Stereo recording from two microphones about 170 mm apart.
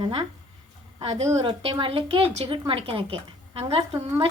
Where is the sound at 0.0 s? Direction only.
30° right (ahead or behind).